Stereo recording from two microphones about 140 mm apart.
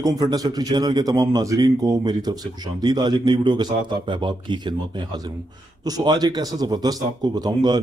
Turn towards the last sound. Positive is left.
turn(degrees=-30)  # may be behind; listen again after turning